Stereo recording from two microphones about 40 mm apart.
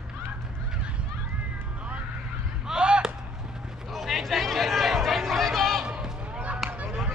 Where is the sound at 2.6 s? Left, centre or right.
Right.